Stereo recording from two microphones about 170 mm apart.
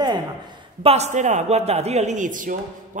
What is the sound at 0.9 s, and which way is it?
A man's voice, 40° right (ahead or behind).